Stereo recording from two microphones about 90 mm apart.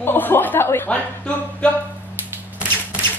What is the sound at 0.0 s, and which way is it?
Speech, 25° left (ahead or behind).